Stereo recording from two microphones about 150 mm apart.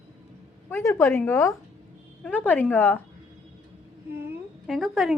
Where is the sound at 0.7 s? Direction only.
15° left (ahead or behind).